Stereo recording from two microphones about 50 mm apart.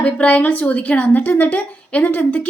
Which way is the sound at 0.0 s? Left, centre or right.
Left.